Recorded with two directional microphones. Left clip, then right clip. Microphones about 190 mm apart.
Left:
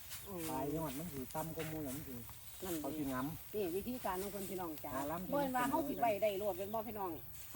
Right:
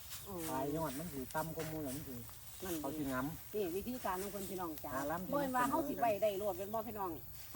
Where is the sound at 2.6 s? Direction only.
5° right (ahead or behind).